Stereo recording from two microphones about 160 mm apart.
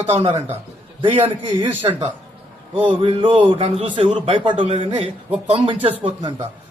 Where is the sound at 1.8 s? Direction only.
35° right (ahead or behind).